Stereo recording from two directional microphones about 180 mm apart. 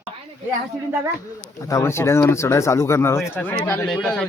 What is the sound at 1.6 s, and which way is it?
A man's voice, 15° left (ahead or behind).